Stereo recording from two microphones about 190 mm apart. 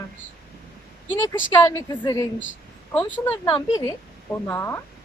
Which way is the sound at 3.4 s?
20° left (ahead or behind).